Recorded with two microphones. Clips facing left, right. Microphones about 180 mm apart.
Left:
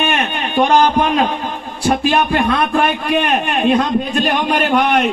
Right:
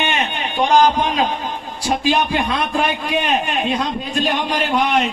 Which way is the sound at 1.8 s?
55° left (ahead or behind).